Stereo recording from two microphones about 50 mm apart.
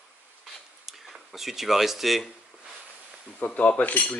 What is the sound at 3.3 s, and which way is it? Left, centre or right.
Speech, left.